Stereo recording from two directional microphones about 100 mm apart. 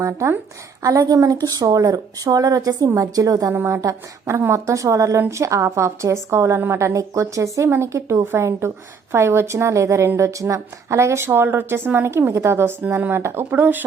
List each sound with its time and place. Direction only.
0.0 s a woman's voice: 30° right (ahead or behind)